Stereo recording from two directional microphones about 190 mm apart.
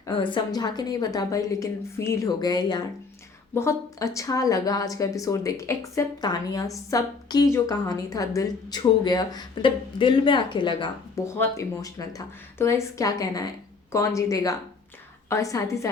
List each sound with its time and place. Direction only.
0.1 s a woman's voice: 25° left (ahead or behind)
11.3 s speech: 15° left (ahead or behind)